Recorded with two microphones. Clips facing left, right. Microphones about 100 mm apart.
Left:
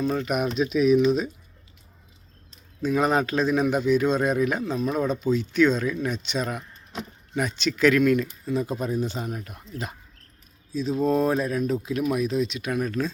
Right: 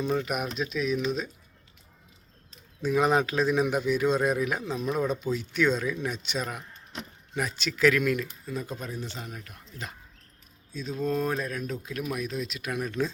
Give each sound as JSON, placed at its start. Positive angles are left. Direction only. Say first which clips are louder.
{"t": 0.0, "sound": "speech", "louder": "left 4 dB", "side_deg": -5}
{"t": 2.8, "sound": "speech", "louder": "left 1 dB", "side_deg": -5}
{"t": 8.8, "sound": "speech", "louder": "left 9 dB", "side_deg": 15}
{"t": 10.7, "sound": "speech", "louder": "left 7 dB", "side_deg": 0}